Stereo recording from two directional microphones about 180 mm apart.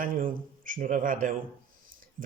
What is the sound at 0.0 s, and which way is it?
Speech, 50° right (ahead or behind).